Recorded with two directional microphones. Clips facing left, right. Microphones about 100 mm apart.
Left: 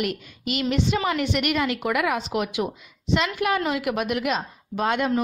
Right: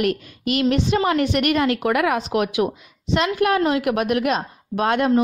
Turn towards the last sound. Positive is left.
turn(degrees=-50)  # may be behind; listen again after turning